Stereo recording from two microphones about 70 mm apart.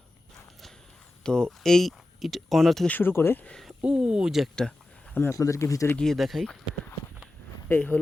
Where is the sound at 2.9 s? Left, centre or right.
Left.